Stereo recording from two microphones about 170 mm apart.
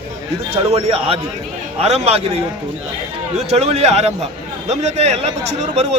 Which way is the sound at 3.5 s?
40° right (ahead or behind).